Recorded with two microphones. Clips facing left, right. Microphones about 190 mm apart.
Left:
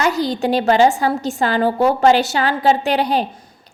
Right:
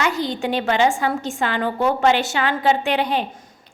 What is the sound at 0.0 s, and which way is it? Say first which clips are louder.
A woman's voice: left 4 dB; 40° left (ahead or behind).